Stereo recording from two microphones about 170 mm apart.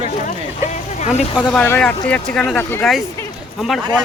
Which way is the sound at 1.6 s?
10° left (ahead or behind).